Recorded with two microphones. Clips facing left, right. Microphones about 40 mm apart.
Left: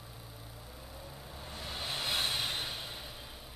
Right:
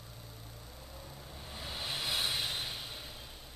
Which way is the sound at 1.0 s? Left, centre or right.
Centre.